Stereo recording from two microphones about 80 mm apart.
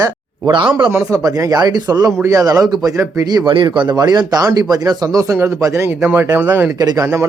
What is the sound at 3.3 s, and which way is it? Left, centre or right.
A man's voice, right.